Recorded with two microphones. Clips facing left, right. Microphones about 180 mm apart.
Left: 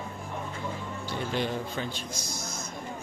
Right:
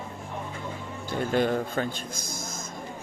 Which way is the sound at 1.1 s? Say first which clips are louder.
Right 6 dB; 50° right (ahead or behind).